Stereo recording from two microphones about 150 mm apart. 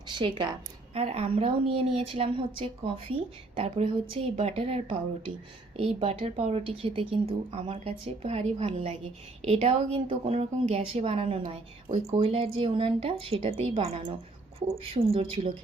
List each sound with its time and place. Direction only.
0.1 s speech: 35° right (ahead or behind)
0.9 s a woman's voice: 45° right (ahead or behind)